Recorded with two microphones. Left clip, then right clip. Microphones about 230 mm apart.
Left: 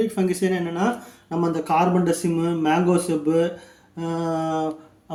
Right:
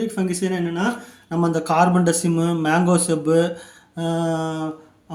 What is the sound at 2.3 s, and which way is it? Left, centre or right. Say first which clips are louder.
Speech: right 1 dB; centre.